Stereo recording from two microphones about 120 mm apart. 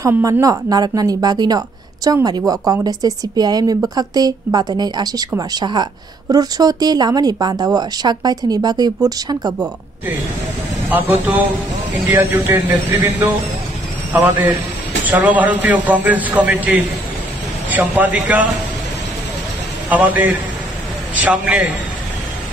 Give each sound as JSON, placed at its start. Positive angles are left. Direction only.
{"t": 0.2, "sound": "speech", "side_deg": -30}
{"t": 10.9, "sound": "a man's voice", "side_deg": -15}
{"t": 12.4, "sound": "a man's voice", "side_deg": -15}
{"t": 19.9, "sound": "a man's voice", "side_deg": -15}